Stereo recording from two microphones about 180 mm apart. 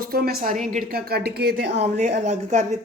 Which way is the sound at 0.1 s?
55° right (ahead or behind).